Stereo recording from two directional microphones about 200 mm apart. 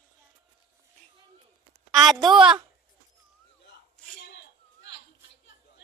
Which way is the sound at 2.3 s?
5° right (ahead or behind).